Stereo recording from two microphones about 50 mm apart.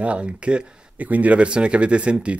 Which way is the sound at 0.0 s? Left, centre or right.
Right.